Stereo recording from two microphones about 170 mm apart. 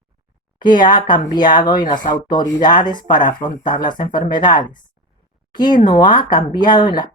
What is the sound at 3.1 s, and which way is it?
Speech, 50° left (ahead or behind).